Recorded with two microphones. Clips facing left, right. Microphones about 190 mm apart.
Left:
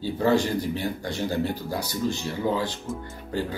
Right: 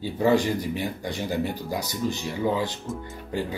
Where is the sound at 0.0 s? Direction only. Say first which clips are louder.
Right 1 dB; 15° right (ahead or behind).